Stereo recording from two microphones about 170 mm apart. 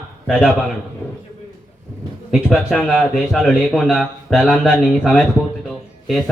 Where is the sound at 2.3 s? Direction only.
Centre (ahead or behind).